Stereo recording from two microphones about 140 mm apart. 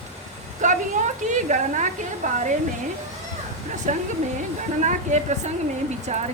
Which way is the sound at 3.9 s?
65° right (ahead or behind).